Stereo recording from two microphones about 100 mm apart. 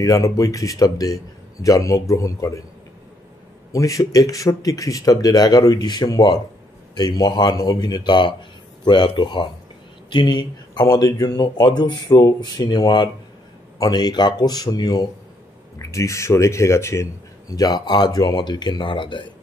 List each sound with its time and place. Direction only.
0.0 s speech: 35° left (ahead or behind)
3.7 s speech: 35° left (ahead or behind)
15.8 s speech: 30° left (ahead or behind); by 19.3 s 50° left (ahead or behind)